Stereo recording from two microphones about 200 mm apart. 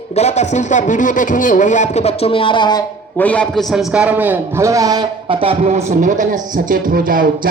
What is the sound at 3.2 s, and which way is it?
Speech, 5° left (ahead or behind).